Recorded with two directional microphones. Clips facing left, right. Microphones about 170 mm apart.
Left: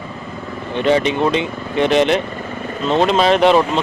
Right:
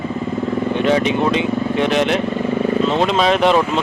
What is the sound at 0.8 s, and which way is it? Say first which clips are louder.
Speech: left 3 dB; centre (ahead or behind).